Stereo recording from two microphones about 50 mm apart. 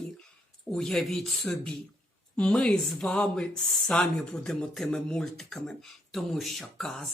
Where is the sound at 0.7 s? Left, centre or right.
Centre.